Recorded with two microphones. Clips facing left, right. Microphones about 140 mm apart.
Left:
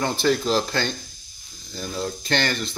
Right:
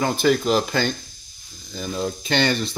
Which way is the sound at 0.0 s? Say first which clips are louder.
Right 2 dB; 5° right (ahead or behind).